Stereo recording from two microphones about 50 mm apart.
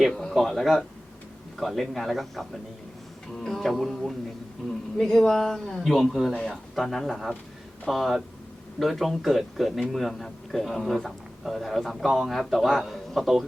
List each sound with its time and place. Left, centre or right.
0.0 s a man's voice: centre